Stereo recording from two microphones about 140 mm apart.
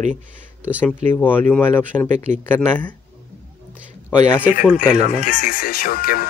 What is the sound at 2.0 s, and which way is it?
Speech, 55° right (ahead or behind).